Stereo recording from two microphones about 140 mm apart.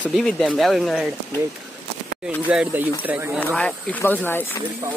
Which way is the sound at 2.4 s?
10° right (ahead or behind).